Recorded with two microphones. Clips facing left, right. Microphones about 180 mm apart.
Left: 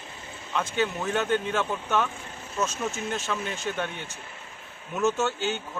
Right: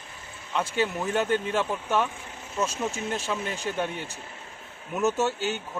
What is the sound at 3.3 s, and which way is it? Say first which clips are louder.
Speech: right 1 dB; 10° right (ahead or behind).